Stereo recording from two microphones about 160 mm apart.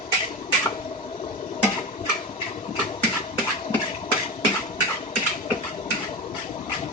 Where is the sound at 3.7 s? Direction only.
35° left (ahead or behind).